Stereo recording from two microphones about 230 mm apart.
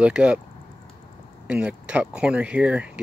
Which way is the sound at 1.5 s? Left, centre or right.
Centre.